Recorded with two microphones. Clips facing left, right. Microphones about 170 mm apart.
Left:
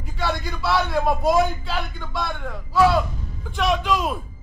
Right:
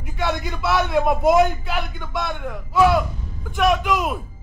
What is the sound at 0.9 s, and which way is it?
A man's voice, 20° right (ahead or behind).